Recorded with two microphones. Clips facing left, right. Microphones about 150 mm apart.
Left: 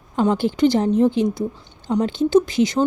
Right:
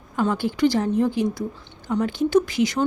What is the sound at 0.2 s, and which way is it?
Speech, 25° left (ahead or behind).